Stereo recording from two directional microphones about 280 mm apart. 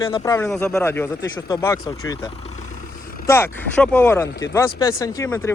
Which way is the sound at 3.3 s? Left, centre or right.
Centre.